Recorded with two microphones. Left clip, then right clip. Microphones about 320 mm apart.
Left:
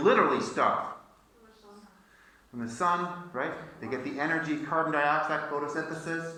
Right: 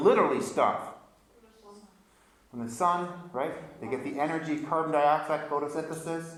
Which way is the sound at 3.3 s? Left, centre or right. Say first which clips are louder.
Right 1 dB; centre.